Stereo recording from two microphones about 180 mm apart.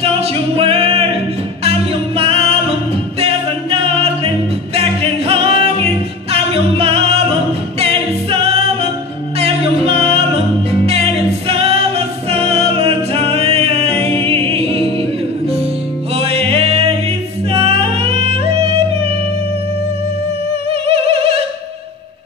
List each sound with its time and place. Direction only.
0.0 s music: 30° right (ahead or behind)
3.8 s music: 35° right (ahead or behind)
9.8 s music: 35° right (ahead or behind)
11.4 s music: 30° right (ahead or behind)
16.2 s music: 35° right (ahead or behind)
17.5 s yodeling: 35° right (ahead or behind)
20.8 s music: 30° right (ahead or behind)